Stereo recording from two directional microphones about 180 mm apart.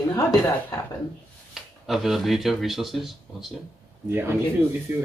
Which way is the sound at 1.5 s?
Centre (ahead or behind).